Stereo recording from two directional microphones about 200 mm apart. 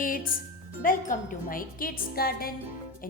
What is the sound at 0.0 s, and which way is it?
A woman's voice, 45° left (ahead or behind).